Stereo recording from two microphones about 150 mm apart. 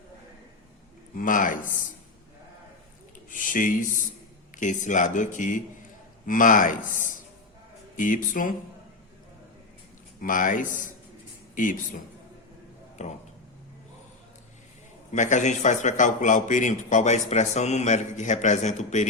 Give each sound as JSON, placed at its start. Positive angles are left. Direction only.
{"t": 1.1, "sound": "speech", "side_deg": 65}
{"t": 3.2, "sound": "speech", "side_deg": 65}
{"t": 10.2, "sound": "speech", "side_deg": 65}
{"t": 13.0, "sound": "a man's voice", "side_deg": 50}
{"t": 15.1, "sound": "a man's voice", "side_deg": 55}